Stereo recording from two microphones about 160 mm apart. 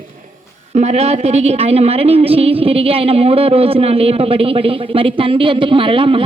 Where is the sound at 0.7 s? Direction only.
40° right (ahead or behind).